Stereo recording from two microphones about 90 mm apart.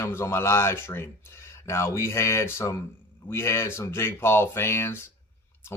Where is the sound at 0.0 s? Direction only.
30° left (ahead or behind).